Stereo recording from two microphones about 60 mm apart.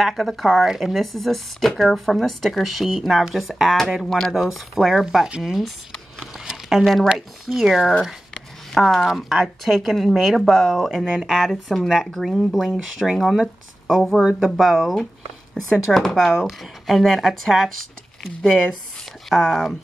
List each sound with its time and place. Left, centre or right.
0.0 s speech: centre
6.1 s a sound: centre
7.2 s speech: centre
19.2 s speech: centre